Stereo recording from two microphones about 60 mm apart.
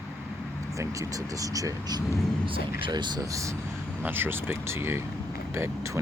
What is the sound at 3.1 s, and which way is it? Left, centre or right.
Speech, right.